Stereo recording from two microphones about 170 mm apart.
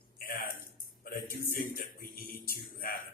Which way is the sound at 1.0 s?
60° left (ahead or behind).